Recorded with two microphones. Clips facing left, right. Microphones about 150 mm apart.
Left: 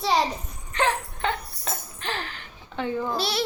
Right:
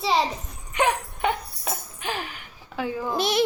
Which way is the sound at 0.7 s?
15° right (ahead or behind).